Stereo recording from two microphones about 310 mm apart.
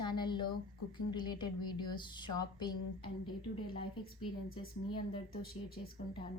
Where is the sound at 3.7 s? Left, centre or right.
Left.